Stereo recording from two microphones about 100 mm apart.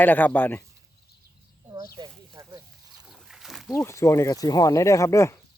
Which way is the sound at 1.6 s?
35° right (ahead or behind).